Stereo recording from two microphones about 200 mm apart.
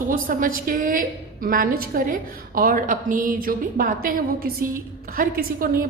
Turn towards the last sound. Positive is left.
turn(degrees=-45)  # may be behind; listen again after turning